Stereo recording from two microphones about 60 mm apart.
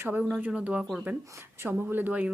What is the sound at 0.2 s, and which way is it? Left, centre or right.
Speech, centre.